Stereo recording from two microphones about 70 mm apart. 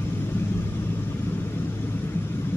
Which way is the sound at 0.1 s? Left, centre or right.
Left.